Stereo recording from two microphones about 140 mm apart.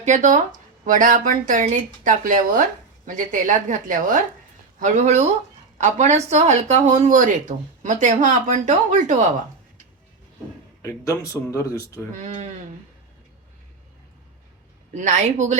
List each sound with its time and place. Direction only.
0.0 s speech: 60° right (ahead or behind)
0.9 s speech: 70° right (ahead or behind)
3.2 s speech: 65° right (ahead or behind)
4.8 s speech: 60° right (ahead or behind)
10.8 s speech: 20° left (ahead or behind)
12.1 s speech: 60° right (ahead or behind)
14.9 s speech: 60° right (ahead or behind)